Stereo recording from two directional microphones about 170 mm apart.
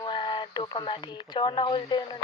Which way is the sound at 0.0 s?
30° left (ahead or behind).